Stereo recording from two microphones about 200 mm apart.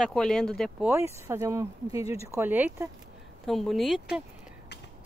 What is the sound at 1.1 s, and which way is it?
Speech, 15° right (ahead or behind).